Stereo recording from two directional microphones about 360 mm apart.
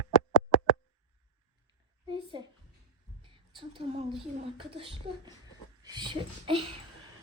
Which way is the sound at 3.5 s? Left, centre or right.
Centre.